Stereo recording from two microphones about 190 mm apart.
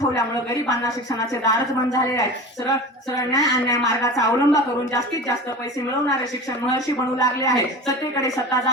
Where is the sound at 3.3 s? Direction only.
15° left (ahead or behind).